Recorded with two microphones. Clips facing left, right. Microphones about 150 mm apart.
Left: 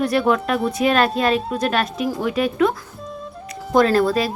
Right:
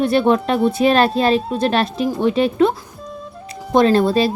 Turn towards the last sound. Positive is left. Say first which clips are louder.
# right 2 dB
turn(degrees=-25)  # may be behind; listen again after turning